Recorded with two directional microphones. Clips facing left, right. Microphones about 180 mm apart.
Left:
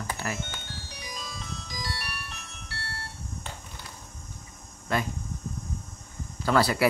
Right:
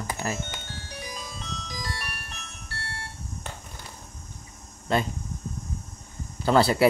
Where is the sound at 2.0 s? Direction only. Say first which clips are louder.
Even; 50° right (ahead or behind).